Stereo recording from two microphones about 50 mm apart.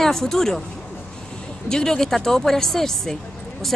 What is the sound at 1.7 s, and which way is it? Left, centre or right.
Speech, centre.